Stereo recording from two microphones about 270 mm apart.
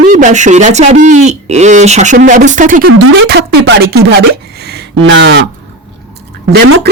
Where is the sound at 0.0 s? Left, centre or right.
Right.